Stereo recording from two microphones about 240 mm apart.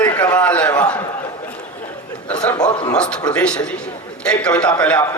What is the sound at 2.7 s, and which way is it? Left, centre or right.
Speech, centre.